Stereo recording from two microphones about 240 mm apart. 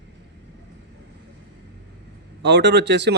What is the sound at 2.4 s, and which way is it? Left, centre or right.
Speech, right.